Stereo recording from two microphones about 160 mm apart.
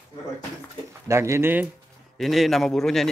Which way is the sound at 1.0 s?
20° right (ahead or behind).